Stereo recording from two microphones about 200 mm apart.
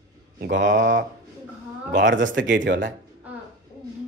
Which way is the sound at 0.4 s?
65° right (ahead or behind).